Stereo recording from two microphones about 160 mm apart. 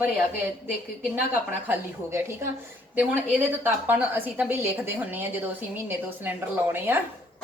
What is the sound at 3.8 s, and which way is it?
Speech, 10° right (ahead or behind).